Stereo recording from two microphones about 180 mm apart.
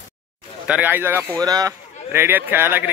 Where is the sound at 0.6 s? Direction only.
10° right (ahead or behind).